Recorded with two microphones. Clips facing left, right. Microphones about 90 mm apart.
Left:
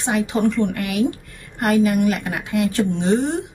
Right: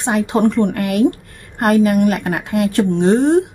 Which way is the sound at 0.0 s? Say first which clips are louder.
Right 4 dB; 45° right (ahead or behind).